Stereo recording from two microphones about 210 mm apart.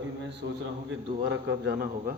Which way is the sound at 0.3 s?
60° right (ahead or behind).